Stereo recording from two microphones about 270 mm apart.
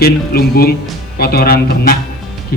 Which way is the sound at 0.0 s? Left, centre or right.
Left.